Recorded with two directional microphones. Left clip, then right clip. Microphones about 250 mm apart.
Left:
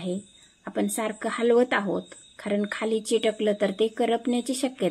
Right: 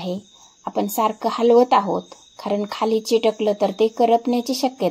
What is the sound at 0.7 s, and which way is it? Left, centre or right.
Speech, right.